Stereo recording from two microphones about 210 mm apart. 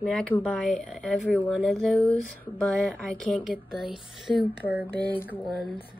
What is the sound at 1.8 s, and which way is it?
Speech, 5° left (ahead or behind).